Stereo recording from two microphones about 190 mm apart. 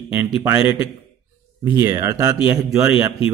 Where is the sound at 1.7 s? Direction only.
15° right (ahead or behind).